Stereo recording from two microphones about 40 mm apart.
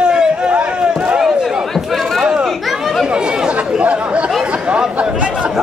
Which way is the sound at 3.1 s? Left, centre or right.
Right.